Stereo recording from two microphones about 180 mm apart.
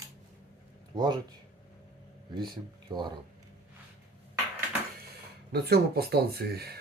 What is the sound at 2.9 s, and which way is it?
Speech, 25° right (ahead or behind).